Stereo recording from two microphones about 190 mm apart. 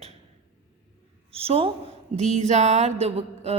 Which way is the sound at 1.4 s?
30° right (ahead or behind).